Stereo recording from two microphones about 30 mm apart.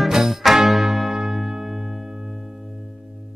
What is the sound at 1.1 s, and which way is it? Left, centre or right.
Music, centre.